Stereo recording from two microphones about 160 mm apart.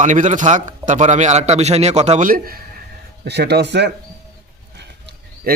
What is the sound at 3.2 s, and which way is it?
Speech, 90° right.